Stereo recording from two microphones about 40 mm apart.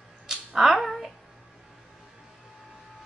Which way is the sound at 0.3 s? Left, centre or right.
Centre.